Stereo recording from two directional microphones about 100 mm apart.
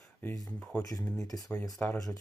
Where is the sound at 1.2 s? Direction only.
40° left (ahead or behind).